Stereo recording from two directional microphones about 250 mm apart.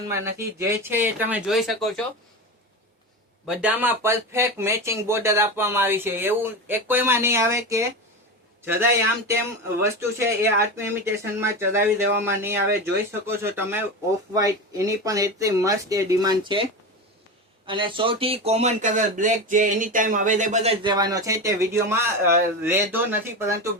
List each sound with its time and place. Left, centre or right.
0.1 s speech: centre
3.4 s speech: centre
17.7 s speech: centre